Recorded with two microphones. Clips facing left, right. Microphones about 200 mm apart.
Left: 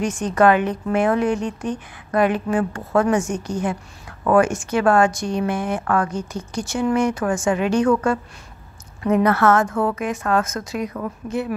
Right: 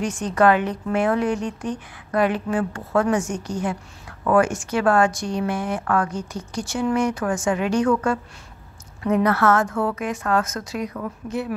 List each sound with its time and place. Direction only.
0.3 s speech: 20° left (ahead or behind)
4.3 s speech: 20° left (ahead or behind)